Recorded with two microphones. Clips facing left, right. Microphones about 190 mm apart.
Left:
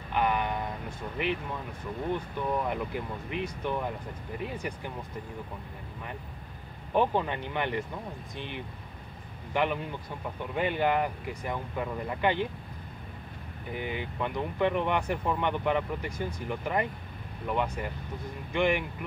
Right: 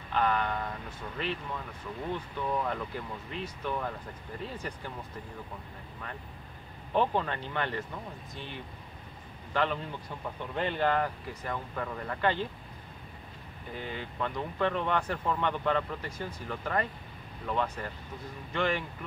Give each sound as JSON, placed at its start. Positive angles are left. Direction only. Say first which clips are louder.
{"t": 0.1, "sound": "speech", "louder": "left 1 dB", "side_deg": 15}
{"t": 6.9, "sound": "speech", "louder": "left 2 dB", "side_deg": 15}
{"t": 13.7, "sound": "speech", "louder": "left 4 dB", "side_deg": 15}